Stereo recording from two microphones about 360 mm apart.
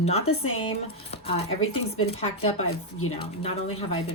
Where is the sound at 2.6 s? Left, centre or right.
Left.